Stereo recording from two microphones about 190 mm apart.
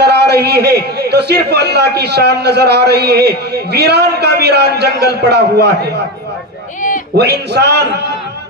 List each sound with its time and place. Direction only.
0.0 s a man's voice: 60° right (ahead or behind)
7.2 s a man's voice: 60° right (ahead or behind)